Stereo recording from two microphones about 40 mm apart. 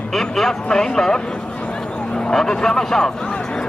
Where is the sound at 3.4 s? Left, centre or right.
Centre.